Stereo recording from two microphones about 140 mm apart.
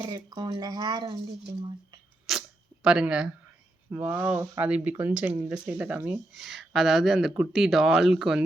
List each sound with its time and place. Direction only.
0.3 s speech: 30° right (ahead or behind)
2.3 s a sound: 5° right (ahead or behind)
2.8 s speech: 5° right (ahead or behind)